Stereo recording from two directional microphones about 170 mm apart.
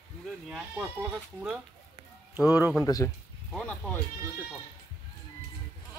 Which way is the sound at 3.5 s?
5° left (ahead or behind).